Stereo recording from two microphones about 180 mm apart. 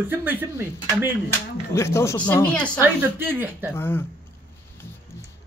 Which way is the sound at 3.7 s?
10° left (ahead or behind).